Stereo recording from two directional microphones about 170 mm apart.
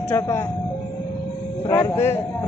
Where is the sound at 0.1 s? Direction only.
15° left (ahead or behind).